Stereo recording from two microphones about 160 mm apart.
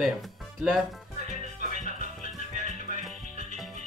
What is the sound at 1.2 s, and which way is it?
Music, 45° right (ahead or behind).